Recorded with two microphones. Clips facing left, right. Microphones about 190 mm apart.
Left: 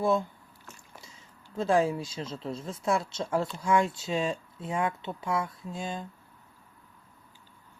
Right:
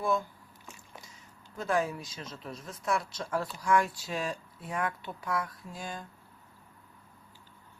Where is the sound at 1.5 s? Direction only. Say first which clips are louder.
Left 5 dB; 25° left (ahead or behind).